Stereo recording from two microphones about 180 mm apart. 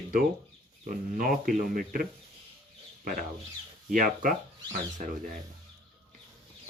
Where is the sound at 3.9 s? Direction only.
45° right (ahead or behind).